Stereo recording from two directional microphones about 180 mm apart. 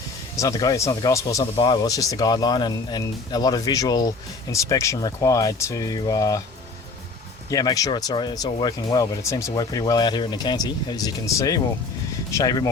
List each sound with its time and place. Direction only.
0.3 s speech: 20° left (ahead or behind)
7.5 s speech: 20° left (ahead or behind)